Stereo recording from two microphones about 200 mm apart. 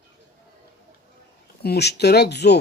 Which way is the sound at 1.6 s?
55° left (ahead or behind).